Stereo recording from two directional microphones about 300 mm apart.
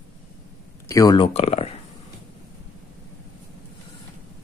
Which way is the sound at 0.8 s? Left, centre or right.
Centre.